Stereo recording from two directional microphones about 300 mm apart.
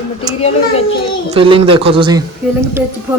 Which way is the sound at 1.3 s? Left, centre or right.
Centre.